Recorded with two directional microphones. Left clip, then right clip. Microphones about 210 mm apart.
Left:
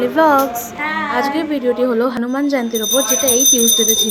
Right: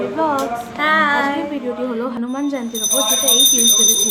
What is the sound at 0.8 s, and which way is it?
Music, 20° right (ahead or behind).